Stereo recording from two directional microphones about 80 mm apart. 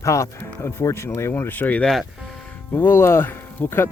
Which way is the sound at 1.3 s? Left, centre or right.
Left.